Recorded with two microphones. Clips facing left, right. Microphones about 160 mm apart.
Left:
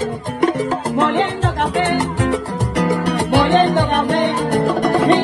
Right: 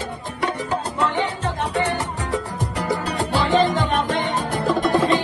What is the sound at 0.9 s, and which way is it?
Salsa music, 90° left.